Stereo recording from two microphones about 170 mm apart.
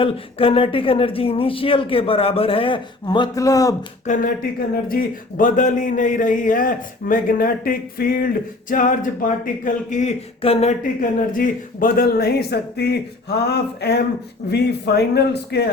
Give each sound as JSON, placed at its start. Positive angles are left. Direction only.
{"t": 0.0, "sound": "speech", "side_deg": 35}
{"t": 4.0, "sound": "a man's voice", "side_deg": 50}
{"t": 11.3, "sound": "speech", "side_deg": 55}